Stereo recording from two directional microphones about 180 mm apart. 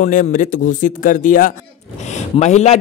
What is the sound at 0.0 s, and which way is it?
A man's voice, 45° left (ahead or behind).